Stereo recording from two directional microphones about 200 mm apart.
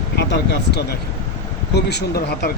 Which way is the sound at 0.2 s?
55° left (ahead or behind).